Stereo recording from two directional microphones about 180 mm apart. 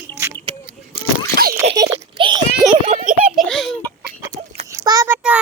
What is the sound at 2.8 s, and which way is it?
Children playing, 40° right (ahead or behind).